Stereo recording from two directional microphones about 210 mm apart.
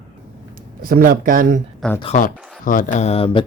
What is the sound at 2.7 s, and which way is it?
Speech, 40° left (ahead or behind).